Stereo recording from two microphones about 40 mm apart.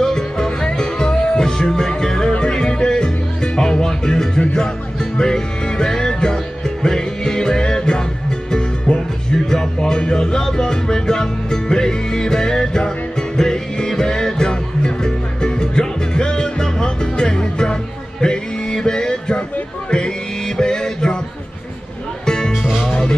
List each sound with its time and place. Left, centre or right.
0.0 s music: centre
22.2 s music: centre
22.5 s music: centre
22.8 s music: centre